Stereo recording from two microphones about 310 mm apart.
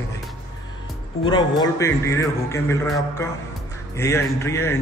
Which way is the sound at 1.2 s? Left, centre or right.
Centre.